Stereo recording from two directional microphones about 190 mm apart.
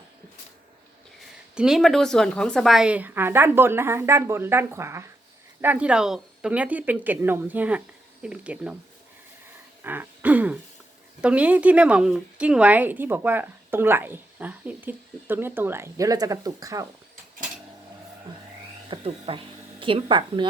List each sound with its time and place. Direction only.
1.5 s speech: centre (ahead or behind)
9.8 s throat clearing: 10° right (ahead or behind)
11.2 s speech: 5° right (ahead or behind)
18.9 s speech: 30° right (ahead or behind)